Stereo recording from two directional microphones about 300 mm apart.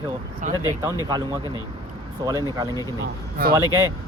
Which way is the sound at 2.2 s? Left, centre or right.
Centre.